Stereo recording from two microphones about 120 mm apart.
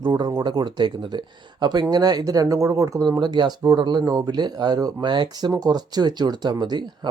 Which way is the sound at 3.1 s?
40° right (ahead or behind).